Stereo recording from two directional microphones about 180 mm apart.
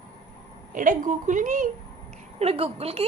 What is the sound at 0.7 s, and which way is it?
A woman's voice, 50° right (ahead or behind).